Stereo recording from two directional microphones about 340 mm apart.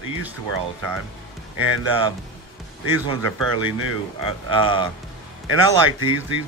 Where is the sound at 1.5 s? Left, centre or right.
Right.